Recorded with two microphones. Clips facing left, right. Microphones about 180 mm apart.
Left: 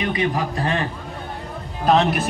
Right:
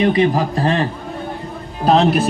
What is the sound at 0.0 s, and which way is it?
Speech, 30° right (ahead or behind).